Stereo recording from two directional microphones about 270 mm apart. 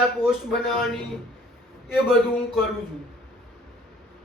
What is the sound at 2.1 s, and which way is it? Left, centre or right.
Speech, centre.